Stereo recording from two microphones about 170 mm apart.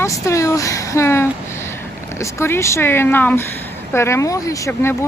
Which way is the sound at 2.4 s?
15° left (ahead or behind).